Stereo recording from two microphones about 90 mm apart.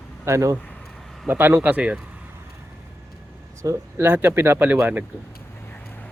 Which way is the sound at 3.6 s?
35° right (ahead or behind).